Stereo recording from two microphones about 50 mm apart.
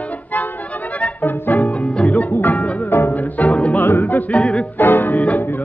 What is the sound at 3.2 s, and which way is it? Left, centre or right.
Music, left.